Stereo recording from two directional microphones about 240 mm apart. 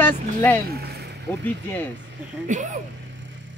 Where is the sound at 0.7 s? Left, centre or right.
Right.